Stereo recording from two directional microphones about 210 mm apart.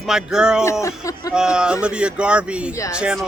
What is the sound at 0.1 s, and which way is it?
Speech, 5° right (ahead or behind).